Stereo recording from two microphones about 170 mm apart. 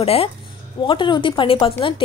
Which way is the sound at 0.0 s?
35° left (ahead or behind).